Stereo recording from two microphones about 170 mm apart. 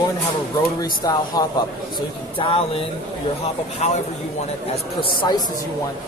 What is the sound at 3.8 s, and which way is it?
Speech, 40° left (ahead or behind).